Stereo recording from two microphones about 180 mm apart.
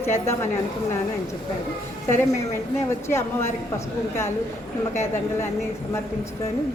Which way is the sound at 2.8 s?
15° left (ahead or behind).